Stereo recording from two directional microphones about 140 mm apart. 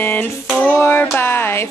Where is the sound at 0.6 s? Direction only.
15° left (ahead or behind).